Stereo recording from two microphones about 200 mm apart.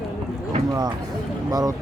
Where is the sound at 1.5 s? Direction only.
20° right (ahead or behind).